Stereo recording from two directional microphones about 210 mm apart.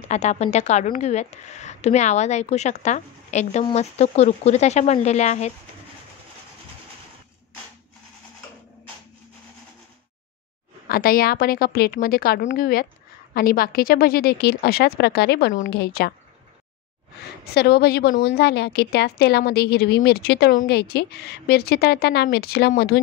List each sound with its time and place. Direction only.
0.1 s a woman's voice: 35° left (ahead or behind)
10.9 s a woman's voice: 45° left (ahead or behind)
17.6 s a woman's voice: 50° left (ahead or behind)